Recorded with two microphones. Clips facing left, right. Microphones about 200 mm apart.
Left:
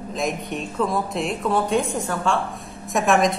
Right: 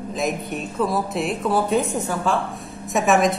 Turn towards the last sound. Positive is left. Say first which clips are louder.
# right 1 dB
turn(degrees=0)  # may be behind; listen again after turning